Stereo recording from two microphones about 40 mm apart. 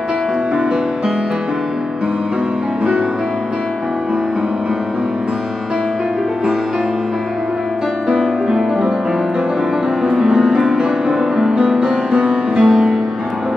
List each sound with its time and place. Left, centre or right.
8.1 s music: right
10.1 s music: centre